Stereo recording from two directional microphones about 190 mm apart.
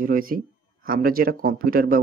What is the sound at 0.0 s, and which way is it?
Speech, 50° right (ahead or behind).